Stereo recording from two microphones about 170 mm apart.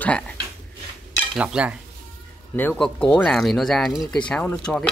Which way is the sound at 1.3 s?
5° right (ahead or behind).